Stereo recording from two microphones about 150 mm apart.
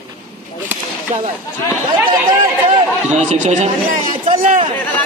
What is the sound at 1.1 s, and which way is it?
Speech, 50° right (ahead or behind).